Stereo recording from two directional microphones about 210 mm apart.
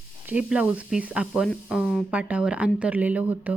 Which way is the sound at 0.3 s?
5° right (ahead or behind).